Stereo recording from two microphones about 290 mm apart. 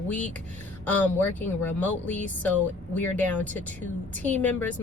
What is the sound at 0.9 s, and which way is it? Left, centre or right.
A woman's voice, centre.